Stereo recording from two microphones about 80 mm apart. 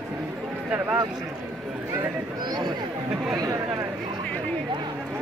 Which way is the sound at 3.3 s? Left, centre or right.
Right.